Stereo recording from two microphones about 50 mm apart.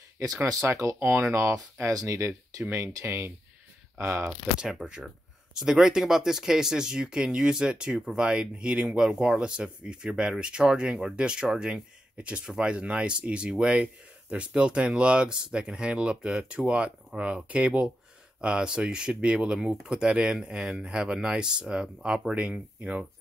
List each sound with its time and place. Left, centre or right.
0.4 s speech: right
4.0 s speech: right
5.0 s speech: centre
20.9 s speech: centre
22.3 s speech: right